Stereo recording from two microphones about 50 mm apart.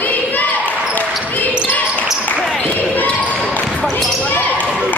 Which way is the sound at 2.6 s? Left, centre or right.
Left.